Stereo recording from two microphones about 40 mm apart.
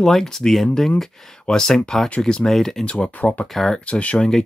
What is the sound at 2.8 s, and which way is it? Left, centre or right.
Speech, left.